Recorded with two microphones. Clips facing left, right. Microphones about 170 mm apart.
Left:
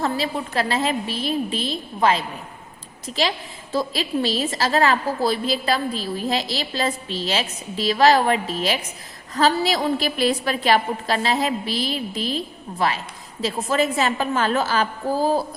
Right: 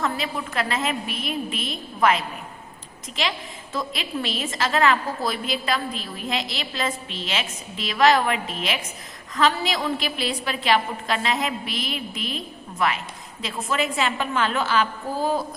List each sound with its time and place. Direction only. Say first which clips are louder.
0.0 s a woman's voice: left 3 dB; 35° left (ahead or behind)